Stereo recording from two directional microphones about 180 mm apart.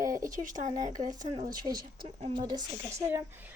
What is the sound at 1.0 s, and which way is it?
Speech, 20° right (ahead or behind).